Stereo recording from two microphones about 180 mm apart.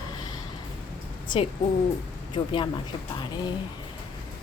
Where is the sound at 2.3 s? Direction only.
25° left (ahead or behind).